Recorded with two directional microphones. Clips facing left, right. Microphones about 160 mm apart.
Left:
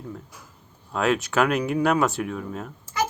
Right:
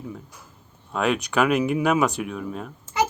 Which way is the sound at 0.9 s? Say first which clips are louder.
Even; centre (ahead or behind).